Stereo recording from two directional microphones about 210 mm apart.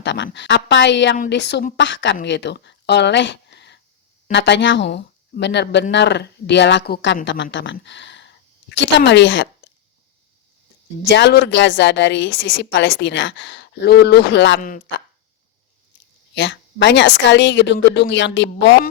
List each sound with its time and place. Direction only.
0.0 s a woman's voice: 60° left (ahead or behind)
11.0 s a woman's voice: 55° left (ahead or behind)
14.6 s speech: 40° left (ahead or behind)
16.3 s a woman's voice: 55° left (ahead or behind)